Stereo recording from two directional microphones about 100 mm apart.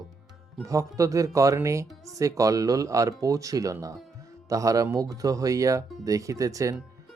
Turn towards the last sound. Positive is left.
turn(degrees=-35)  # may be behind; listen again after turning